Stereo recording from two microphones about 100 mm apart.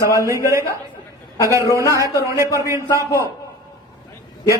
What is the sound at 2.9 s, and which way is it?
Speech, 35° left (ahead or behind).